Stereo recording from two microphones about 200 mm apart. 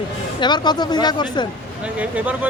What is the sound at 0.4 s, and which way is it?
Speech, 20° left (ahead or behind).